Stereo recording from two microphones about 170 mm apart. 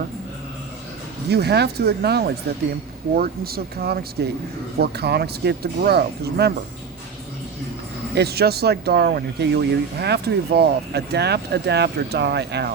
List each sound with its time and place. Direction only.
1.3 s speech: 70° right (ahead or behind)
8.1 s speech: 70° right (ahead or behind)